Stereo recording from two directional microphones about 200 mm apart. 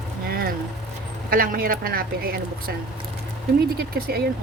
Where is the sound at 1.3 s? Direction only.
45° right (ahead or behind).